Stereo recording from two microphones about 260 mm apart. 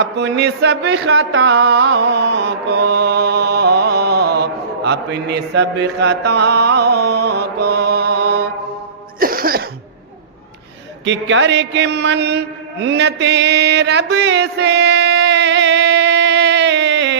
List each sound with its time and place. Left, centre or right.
0.0 s music: right
9.2 s cough: right
11.0 s mantra: right